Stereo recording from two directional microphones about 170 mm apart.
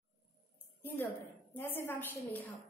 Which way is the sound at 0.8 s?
10° left (ahead or behind).